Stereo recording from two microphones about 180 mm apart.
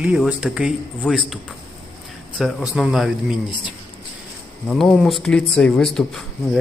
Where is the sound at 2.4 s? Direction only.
Centre (ahead or behind).